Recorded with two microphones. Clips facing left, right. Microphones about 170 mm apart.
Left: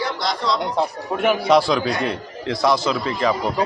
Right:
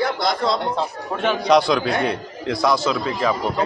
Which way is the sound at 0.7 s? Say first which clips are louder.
Left 3 dB; 10° left (ahead or behind).